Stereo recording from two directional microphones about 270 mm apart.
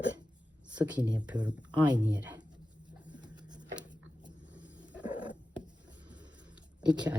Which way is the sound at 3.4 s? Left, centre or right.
Centre.